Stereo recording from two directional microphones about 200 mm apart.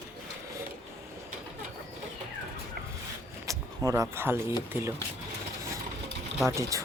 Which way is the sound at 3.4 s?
15° right (ahead or behind).